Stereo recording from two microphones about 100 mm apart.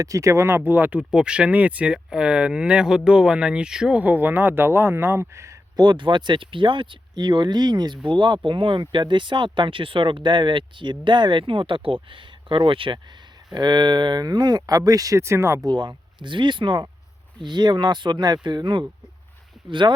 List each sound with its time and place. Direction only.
0.0 s speech: 30° right (ahead or behind)
5.7 s speech: 50° right (ahead or behind)
13.5 s speech: 45° right (ahead or behind); by 15.6 s 30° right (ahead or behind)
15.6 s speech: 45° right (ahead or behind)